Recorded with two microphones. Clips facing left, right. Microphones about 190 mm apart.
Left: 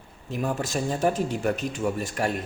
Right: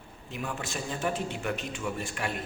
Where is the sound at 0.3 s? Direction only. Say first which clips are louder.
Left 8 dB; 40° left (ahead or behind).